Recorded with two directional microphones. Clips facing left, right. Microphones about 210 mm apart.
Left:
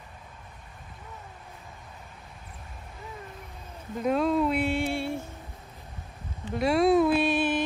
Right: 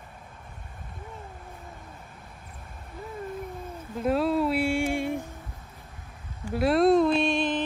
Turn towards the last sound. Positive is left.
turn(degrees=5)  # may be behind; listen again after turning